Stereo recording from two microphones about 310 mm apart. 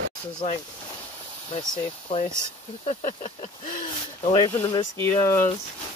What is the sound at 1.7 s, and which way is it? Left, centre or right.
Speech, centre.